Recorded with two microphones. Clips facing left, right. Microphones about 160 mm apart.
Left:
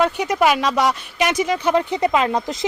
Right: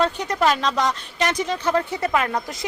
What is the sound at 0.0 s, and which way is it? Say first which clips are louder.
Speech: left 3 dB; 10° left (ahead or behind).